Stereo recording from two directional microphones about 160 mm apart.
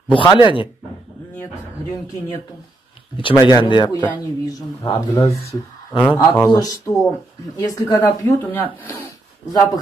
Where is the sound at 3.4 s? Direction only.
30° left (ahead or behind); by 9.1 s 10° left (ahead or behind).